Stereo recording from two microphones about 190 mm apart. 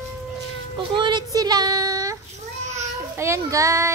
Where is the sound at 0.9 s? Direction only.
25° right (ahead or behind).